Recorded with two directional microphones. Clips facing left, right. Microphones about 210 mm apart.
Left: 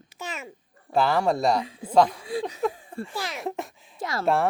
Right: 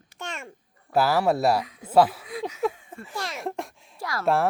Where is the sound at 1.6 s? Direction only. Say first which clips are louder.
Left 1 dB; 30° left (ahead or behind).